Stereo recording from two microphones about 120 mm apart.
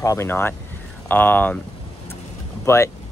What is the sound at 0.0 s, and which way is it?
Speech, 25° left (ahead or behind).